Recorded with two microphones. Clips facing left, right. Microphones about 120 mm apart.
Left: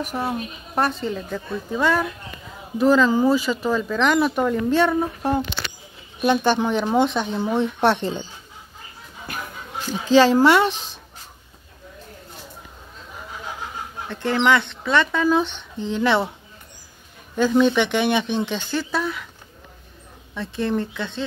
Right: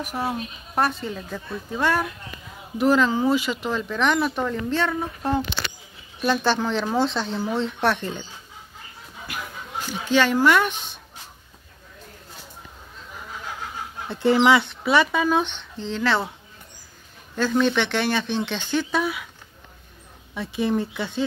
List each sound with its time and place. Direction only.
0.0 s speech: 5° right (ahead or behind); by 7.3 s 15° left (ahead or behind)
7.3 s speech: 25° left (ahead or behind)
10.1 s speech: 35° left (ahead or behind)
14.0 s speech: 10° right (ahead or behind)
15.8 s speech: 15° left (ahead or behind)
17.4 s speech: 10° left (ahead or behind)
20.3 s speech: 5° right (ahead or behind)